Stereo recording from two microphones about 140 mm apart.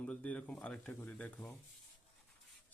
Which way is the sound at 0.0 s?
10° left (ahead or behind).